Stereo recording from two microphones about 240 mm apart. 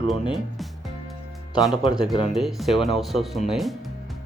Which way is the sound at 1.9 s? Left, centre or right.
Centre.